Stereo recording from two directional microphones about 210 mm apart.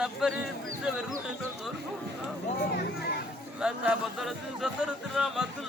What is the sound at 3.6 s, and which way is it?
Music, 5° right (ahead or behind).